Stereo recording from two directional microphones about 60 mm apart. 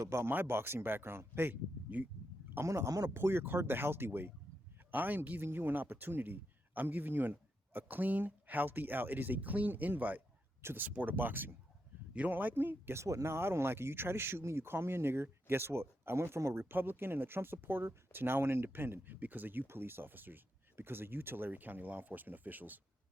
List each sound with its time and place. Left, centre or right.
0.0 s speech: right
1.9 s speech: right
2.6 s speech: right
3.1 s a man's voice: right
10.6 s speech: right
10.8 s speech: right
13.0 s speech: right